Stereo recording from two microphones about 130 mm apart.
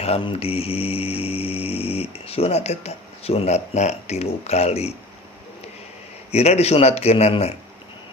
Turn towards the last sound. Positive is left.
turn(degrees=50)  # may be behind; listen again after turning